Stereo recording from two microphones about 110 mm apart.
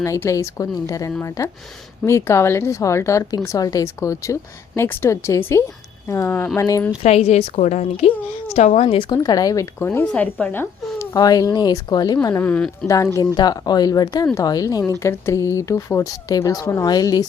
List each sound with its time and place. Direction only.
0.0 s speech: 30° left (ahead or behind)
7.0 s a woman's voice: 75° left (ahead or behind); by 8.1 s 90° left
8.5 s speech: 75° left (ahead or behind); by 9.0 s 60° left (ahead or behind)
9.0 s speech: 40° left (ahead or behind); by 10.1 s 20° left (ahead or behind)
10.1 s speech: 10° left (ahead or behind)
11.1 s speech: 35° left (ahead or behind)
12.4 s speech: 10° left (ahead or behind)
13.3 s speech: 40° left (ahead or behind)